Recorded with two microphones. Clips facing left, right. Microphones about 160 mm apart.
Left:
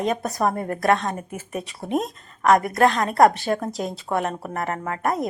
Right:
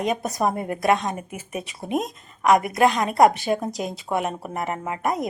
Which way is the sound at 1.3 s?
Centre (ahead or behind).